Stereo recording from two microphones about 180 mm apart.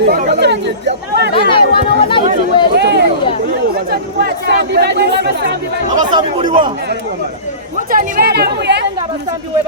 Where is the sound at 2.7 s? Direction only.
70° right (ahead or behind).